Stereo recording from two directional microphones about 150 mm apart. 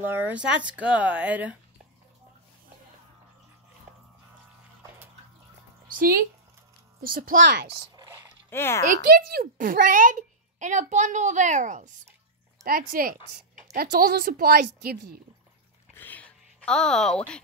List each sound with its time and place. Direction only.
0.0 s speech: 10° right (ahead or behind)
4.8 s water: 15° right (ahead or behind)
5.9 s speech: 70° right (ahead or behind)
8.5 s a child's voice: 15° left (ahead or behind)
9.3 s a woman's voice: 70° right (ahead or behind)
12.6 s a woman's voice: 75° right (ahead or behind)
15.9 s a sound: 10° left (ahead or behind)